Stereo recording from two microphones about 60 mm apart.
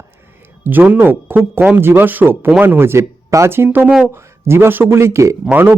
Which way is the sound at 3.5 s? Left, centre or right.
Right.